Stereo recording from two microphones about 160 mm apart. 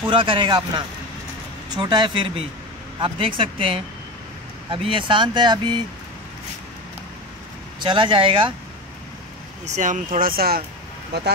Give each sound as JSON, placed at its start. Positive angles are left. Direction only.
{"t": 0.1, "sound": "speech", "side_deg": -30}
{"t": 7.8, "sound": "speech", "side_deg": -30}
{"t": 9.7, "sound": "speech", "side_deg": -50}
{"t": 10.2, "sound": "speech", "side_deg": -70}
{"t": 11.1, "sound": "speech", "side_deg": -90}